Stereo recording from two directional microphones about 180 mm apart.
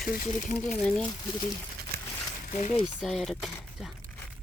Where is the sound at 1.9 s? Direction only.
55° right (ahead or behind).